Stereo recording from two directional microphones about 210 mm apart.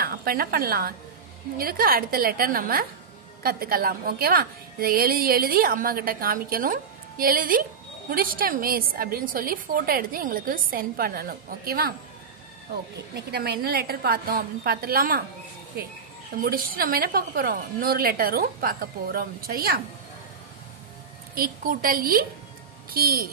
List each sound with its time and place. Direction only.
0.0 s a woman's voice: 45° right (ahead or behind)
13.1 s a woman's voice: 50° right (ahead or behind)
21.4 s a woman's voice: 45° right (ahead or behind)